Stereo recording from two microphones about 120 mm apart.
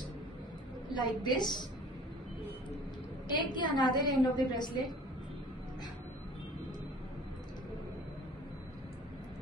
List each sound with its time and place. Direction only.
0.8 s a woman's voice: 35° left (ahead or behind)
3.3 s a woman's voice: 40° left (ahead or behind)